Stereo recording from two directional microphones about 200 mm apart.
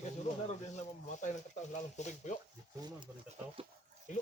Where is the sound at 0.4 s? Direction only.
35° left (ahead or behind).